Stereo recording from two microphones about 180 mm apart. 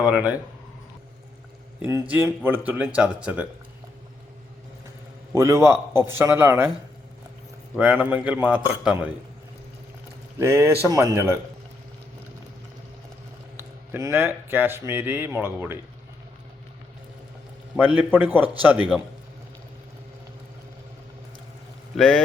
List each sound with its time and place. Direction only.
0.1 s speech: 5° right (ahead or behind)
1.8 s speech: 10° right (ahead or behind)
5.3 s speech: 15° right (ahead or behind)
7.8 s speech: 10° right (ahead or behind)
10.3 s speech: 15° right (ahead or behind)
13.6 s speech: 15° right (ahead or behind)
17.7 s speech: 10° right (ahead or behind)
21.9 s speech: centre (ahead or behind)